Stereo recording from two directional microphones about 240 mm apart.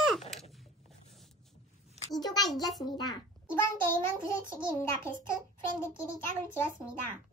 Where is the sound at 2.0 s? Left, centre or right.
Centre.